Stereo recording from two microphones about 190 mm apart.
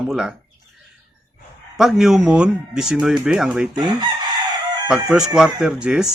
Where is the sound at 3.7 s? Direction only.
20° right (ahead or behind).